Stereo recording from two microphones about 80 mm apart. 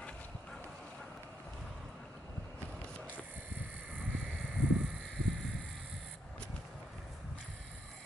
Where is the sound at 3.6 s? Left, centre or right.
Centre.